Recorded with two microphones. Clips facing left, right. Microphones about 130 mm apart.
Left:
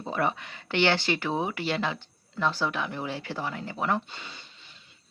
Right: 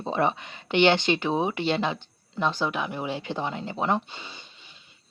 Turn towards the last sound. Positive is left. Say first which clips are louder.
# right 2 dB
turn(degrees=-15)  # may be behind; listen again after turning